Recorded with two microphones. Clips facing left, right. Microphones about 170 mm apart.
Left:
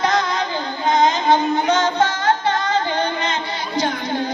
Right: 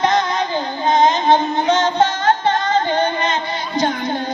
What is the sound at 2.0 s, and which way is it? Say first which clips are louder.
Music: right 2 dB; 50° right (ahead or behind).